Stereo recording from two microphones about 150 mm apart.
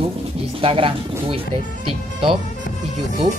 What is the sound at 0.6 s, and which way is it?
Speech, 40° right (ahead or behind).